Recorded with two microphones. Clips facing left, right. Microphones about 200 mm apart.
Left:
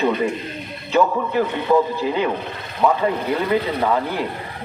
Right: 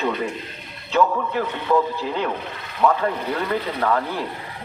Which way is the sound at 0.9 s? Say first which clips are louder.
Left 2 dB; 5° left (ahead or behind).